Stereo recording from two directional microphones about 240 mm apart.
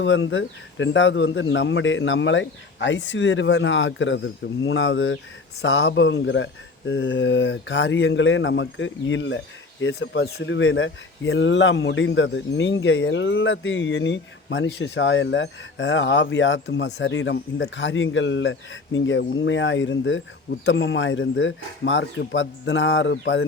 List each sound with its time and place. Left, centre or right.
0.0 s speech: left